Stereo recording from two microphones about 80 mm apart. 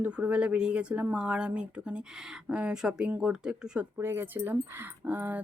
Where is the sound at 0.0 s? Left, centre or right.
Centre.